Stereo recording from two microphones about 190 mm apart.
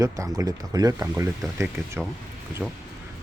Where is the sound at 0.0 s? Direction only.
20° right (ahead or behind).